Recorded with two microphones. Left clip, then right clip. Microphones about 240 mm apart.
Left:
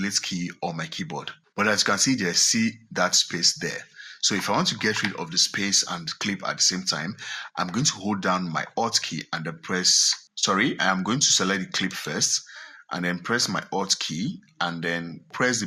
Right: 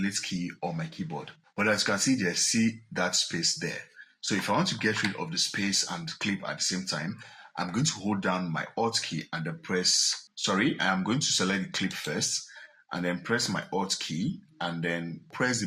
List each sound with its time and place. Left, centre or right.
0.0 s speech: left